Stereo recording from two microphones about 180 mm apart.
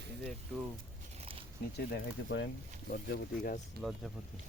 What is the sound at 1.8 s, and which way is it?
Speech, 80° left.